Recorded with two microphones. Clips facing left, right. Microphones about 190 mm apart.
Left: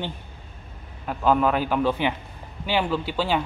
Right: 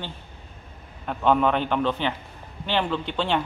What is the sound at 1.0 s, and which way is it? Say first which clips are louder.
A man's voice: even; 5° left (ahead or behind).